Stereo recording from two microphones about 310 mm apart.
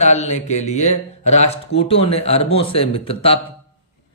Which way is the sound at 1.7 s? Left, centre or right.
Left.